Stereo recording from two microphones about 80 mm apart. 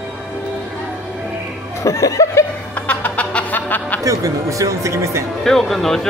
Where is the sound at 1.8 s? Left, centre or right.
Left.